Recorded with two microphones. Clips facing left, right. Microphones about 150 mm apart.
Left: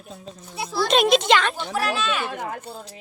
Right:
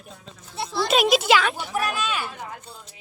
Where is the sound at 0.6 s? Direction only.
Centre (ahead or behind).